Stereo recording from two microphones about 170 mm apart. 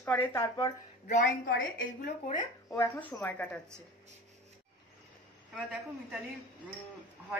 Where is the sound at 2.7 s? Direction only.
10° left (ahead or behind).